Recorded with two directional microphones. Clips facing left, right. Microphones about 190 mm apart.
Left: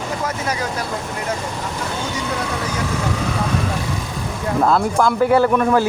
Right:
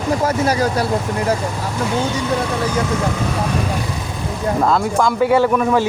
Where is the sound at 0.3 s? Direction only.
35° right (ahead or behind).